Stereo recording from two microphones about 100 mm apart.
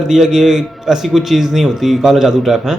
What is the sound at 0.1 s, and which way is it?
A man's voice, 5° right (ahead or behind).